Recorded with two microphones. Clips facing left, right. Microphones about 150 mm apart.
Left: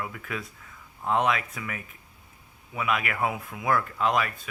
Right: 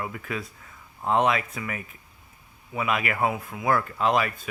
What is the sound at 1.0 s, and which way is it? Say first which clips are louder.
Speech: right 3 dB; 35° right (ahead or behind).